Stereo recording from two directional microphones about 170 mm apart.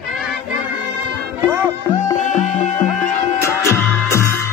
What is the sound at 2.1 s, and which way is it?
Music, 45° left (ahead or behind).